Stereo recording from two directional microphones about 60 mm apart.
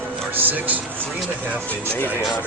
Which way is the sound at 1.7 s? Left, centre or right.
Left.